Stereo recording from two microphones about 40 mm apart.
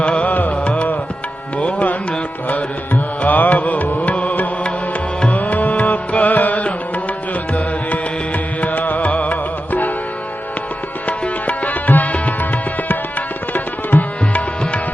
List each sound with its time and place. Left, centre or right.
0.0 s music: left
4.1 s music: left
8.6 s music: left
11.4 s music: left
12.9 s tabla: left